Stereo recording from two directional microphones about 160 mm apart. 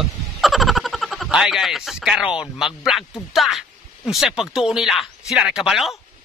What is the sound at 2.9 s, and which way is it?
Speech, 5° right (ahead or behind).